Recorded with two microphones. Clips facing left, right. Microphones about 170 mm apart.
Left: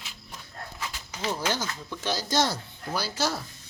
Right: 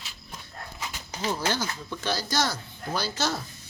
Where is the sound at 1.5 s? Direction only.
15° left (ahead or behind).